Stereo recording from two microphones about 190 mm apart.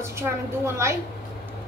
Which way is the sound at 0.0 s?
15° right (ahead or behind).